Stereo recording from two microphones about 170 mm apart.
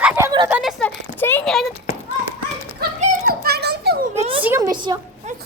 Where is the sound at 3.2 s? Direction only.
65° right (ahead or behind).